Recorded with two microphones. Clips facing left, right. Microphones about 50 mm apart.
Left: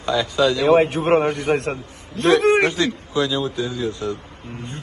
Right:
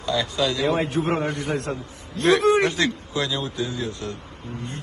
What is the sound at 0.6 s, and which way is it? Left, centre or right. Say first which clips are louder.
A man's voice: left 7 dB; left.